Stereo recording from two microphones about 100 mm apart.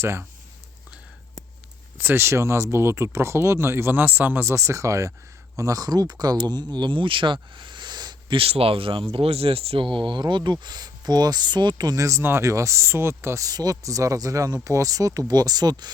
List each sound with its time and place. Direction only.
0.0 s speech: 25° right (ahead or behind)
2.0 s speech: 25° right (ahead or behind); by 7.3 s 55° right (ahead or behind)
7.5 s a sound: 50° right (ahead or behind)
8.4 s speech: 75° right (ahead or behind)
9.1 s speech: 75° right (ahead or behind); by 15.9 s 40° right (ahead or behind)